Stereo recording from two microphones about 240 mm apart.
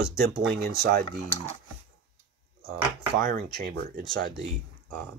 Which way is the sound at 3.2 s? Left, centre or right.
Right.